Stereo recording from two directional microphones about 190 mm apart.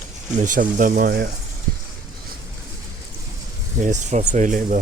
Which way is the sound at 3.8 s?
40° right (ahead or behind).